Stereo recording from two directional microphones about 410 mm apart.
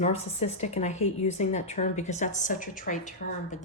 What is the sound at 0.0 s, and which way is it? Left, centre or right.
Speech, centre.